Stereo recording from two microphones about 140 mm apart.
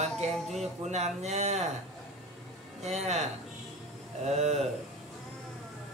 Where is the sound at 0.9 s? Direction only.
50° right (ahead or behind).